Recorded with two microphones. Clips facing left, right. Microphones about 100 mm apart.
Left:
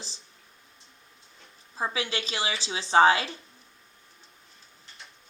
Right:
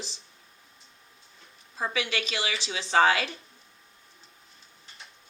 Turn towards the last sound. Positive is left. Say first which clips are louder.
# left 2 dB
turn(degrees=30)  # may be behind; listen again after turning